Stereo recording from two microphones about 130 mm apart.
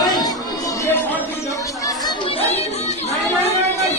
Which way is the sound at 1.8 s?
30° left (ahead or behind).